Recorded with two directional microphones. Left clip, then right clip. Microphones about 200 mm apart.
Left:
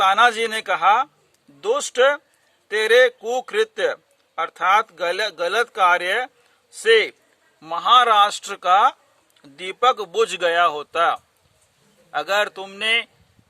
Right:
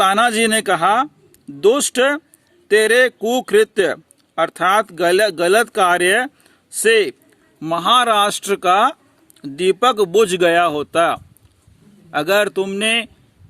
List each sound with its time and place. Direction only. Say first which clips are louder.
0.0 s a man's voice: right 2 dB; 45° right (ahead or behind)